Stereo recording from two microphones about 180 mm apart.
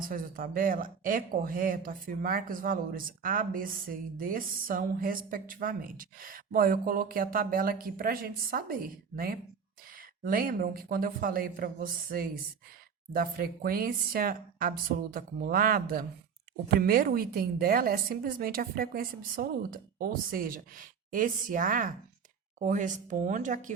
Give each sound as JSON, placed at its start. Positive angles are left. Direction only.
{"t": 0.0, "sound": "speech", "side_deg": -50}